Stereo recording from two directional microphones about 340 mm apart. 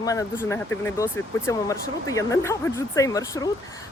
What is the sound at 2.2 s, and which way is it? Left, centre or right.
Speech, centre.